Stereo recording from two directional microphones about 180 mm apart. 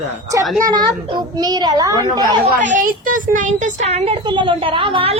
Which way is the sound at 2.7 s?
45° right (ahead or behind).